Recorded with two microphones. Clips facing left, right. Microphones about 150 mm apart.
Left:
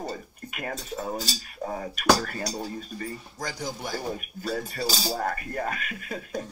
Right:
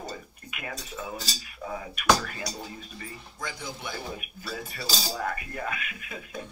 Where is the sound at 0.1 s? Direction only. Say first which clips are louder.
Left 4 dB; 40° left (ahead or behind).